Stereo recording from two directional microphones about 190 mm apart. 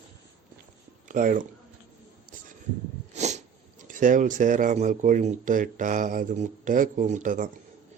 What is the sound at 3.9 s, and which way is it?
Speech, 45° right (ahead or behind).